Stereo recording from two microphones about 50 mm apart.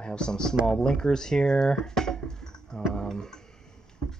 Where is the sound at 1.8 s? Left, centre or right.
Centre.